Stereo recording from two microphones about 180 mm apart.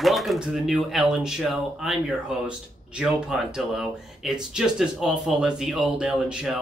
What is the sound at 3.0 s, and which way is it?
Speech, 5° right (ahead or behind).